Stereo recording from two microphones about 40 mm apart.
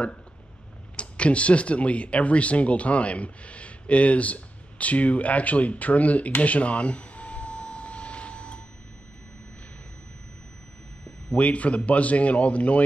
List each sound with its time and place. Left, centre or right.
0.9 s speech: left
6.4 s a sound: left
11.3 s speech: left